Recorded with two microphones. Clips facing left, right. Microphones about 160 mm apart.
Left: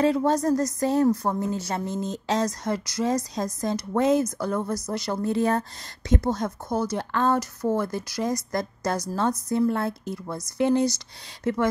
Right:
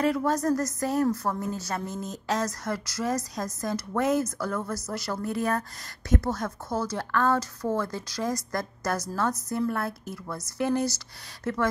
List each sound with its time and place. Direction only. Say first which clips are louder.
0.0 s a woman's voice: left 3 dB; 25° left (ahead or behind)